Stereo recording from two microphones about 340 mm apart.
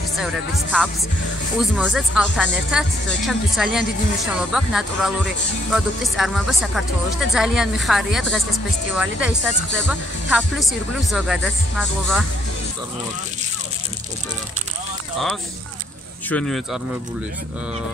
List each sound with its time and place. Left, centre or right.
0.2 s speech: centre
16.3 s speech: centre